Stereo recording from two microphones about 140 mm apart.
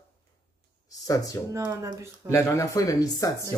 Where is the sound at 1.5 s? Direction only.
20° right (ahead or behind).